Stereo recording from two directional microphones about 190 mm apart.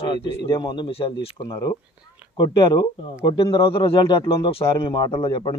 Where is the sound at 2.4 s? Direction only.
25° left (ahead or behind).